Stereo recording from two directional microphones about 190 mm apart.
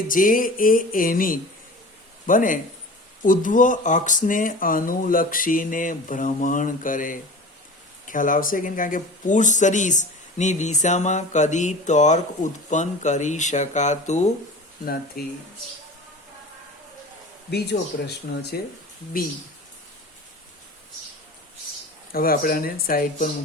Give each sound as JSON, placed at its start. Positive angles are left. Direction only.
{"t": 0.1, "sound": "speech", "side_deg": 45}
{"t": 15.2, "sound": "speech", "side_deg": 50}
{"t": 17.5, "sound": "speech", "side_deg": 60}
{"t": 22.1, "sound": "speech", "side_deg": 50}